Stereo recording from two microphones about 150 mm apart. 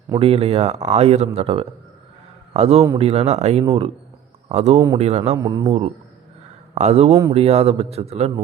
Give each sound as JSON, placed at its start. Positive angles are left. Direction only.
{"t": 0.2, "sound": "a man's voice", "side_deg": -40}
{"t": 4.5, "sound": "a man's voice", "side_deg": -50}
{"t": 5.4, "sound": "a man's voice", "side_deg": -25}
{"t": 6.7, "sound": "a man's voice", "side_deg": -45}